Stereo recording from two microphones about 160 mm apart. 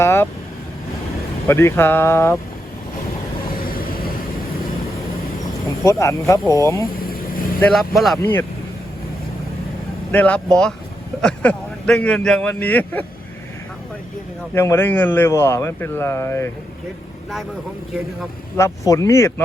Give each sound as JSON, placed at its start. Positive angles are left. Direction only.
{"t": 0.0, "sound": "vehicle", "side_deg": 15}
{"t": 1.5, "sound": "speech", "side_deg": 15}
{"t": 3.6, "sound": "vehicle", "side_deg": 65}
{"t": 5.6, "sound": "speech", "side_deg": 20}
{"t": 7.1, "sound": "vehicle", "side_deg": 65}
{"t": 7.7, "sound": "speech", "side_deg": 0}
{"t": 8.2, "sound": "speech", "side_deg": 15}
{"t": 10.1, "sound": "speech", "side_deg": 10}
{"t": 14.5, "sound": "speech", "side_deg": 15}
{"t": 18.5, "sound": "speech", "side_deg": 20}